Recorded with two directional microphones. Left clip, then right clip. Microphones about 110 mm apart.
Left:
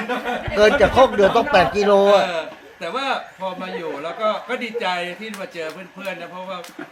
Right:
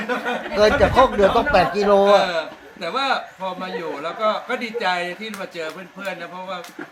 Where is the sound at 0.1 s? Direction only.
Centre (ahead or behind).